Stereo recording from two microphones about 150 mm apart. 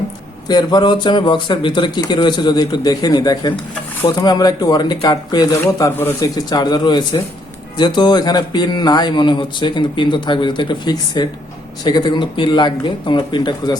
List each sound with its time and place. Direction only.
0.4 s speech: 25° left (ahead or behind)